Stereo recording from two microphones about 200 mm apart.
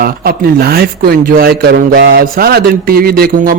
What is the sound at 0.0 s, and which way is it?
Speech, 50° right (ahead or behind).